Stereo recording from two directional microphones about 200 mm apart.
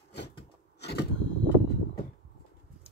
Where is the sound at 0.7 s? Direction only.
55° left (ahead or behind).